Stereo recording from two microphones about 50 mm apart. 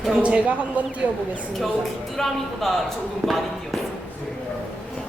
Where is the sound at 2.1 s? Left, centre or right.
Centre.